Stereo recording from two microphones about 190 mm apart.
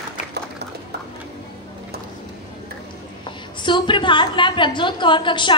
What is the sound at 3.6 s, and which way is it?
A woman's voice, 25° left (ahead or behind).